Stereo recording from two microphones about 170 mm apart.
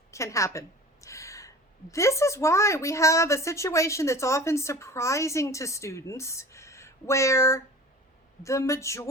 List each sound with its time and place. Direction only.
0.1 s a woman's voice: 15° left (ahead or behind)